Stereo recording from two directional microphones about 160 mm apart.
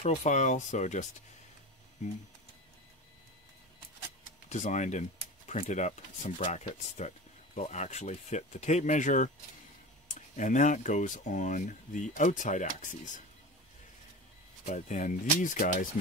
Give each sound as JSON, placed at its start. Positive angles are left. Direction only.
{"t": 0.0, "sound": "speech", "side_deg": 50}
{"t": 4.5, "sound": "speech", "side_deg": 50}
{"t": 10.3, "sound": "speech", "side_deg": 50}
{"t": 14.7, "sound": "speech", "side_deg": 50}